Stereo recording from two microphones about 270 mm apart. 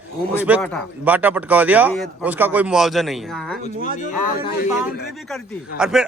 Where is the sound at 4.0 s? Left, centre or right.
Left.